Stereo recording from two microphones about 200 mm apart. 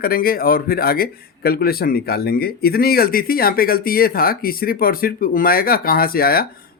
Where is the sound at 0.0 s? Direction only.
50° left (ahead or behind).